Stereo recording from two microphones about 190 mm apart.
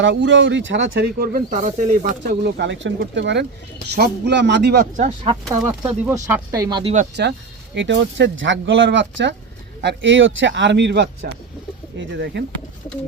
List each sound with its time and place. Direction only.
0.0 s speech: 75° right (ahead or behind)
4.9 s speech: 30° right (ahead or behind)
5.5 s speech: 10° right (ahead or behind)
7.2 s speech: 55° right (ahead or behind)
7.8 s speech: 70° right (ahead or behind)